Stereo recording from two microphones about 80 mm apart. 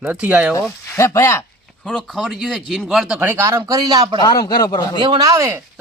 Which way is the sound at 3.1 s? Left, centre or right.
Right.